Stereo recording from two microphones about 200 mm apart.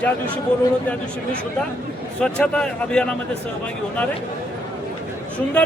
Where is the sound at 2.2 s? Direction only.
5° left (ahead or behind).